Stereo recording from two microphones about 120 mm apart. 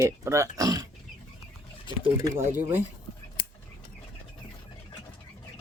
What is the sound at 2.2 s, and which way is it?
Speech, 30° right (ahead or behind).